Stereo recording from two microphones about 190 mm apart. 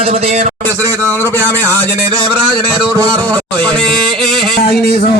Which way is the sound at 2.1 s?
25° right (ahead or behind).